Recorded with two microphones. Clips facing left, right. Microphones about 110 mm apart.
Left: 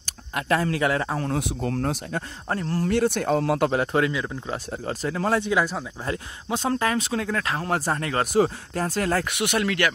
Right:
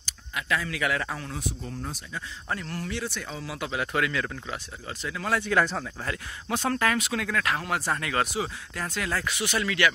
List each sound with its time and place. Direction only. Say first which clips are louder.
0.0 s speech: left 5 dB; 50° left (ahead or behind)
1.3 s speech: left 9 dB; 75° left (ahead or behind)
2.5 s speech: left 7 dB; 40° left (ahead or behind)
2.9 s speech: left 17 dB; 55° left (ahead or behind)
3.8 s speech: left 4 dB; 30° left (ahead or behind)
5.4 s speech: left 1 dB; 10° left (ahead or behind)
6.0 s speech: left 4 dB; 25° left (ahead or behind); by 9.9 s 55° left (ahead or behind)